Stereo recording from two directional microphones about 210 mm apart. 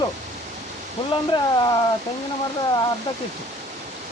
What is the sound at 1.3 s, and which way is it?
Speech, 20° left (ahead or behind).